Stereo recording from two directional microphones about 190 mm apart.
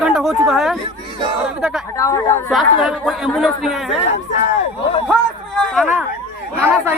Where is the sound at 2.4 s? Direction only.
Centre (ahead or behind).